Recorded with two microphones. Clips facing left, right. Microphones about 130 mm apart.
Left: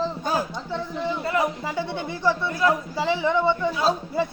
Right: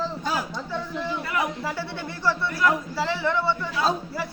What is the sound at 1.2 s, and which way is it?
A man's voice, 25° left (ahead or behind).